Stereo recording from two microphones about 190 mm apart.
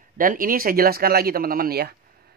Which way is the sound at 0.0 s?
45° right (ahead or behind).